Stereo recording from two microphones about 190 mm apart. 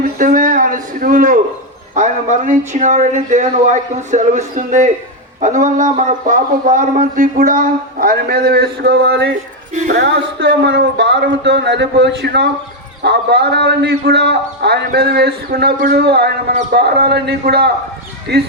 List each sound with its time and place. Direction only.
0.0 s a sound: 45° right (ahead or behind)
2.0 s a man's voice: 40° right (ahead or behind); by 9.3 s 60° right (ahead or behind)
9.8 s a man's voice: 50° right (ahead or behind)
10.3 s a man's voice: 65° right (ahead or behind)